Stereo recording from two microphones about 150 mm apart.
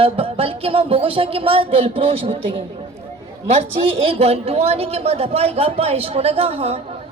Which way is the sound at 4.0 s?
40° right (ahead or behind).